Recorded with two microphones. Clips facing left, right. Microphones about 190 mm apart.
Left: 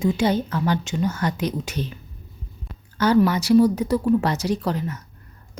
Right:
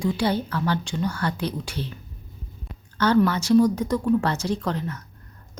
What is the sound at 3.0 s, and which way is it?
A woman's voice, 10° left (ahead or behind).